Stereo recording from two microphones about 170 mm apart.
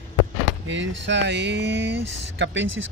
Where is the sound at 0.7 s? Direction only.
90° right.